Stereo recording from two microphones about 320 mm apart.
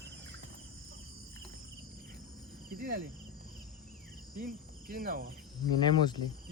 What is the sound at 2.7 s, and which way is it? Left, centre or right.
Insect, right.